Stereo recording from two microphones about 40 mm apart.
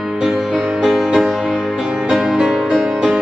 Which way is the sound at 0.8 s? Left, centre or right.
Centre.